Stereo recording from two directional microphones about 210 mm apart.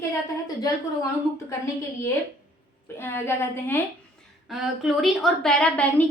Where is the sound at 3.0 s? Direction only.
10° left (ahead or behind).